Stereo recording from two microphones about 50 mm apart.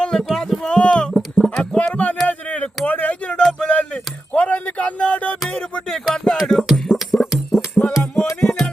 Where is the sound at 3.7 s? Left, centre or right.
Left.